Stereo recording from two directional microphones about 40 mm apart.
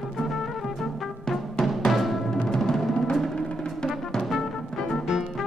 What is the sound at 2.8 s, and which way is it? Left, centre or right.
Music, centre.